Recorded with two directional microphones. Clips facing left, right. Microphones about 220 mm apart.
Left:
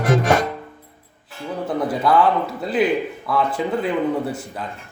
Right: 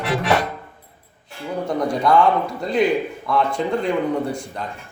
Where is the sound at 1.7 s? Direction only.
5° left (ahead or behind).